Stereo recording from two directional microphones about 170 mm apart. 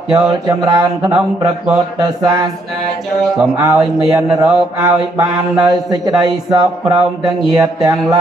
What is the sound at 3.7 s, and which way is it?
Speech, 5° right (ahead or behind).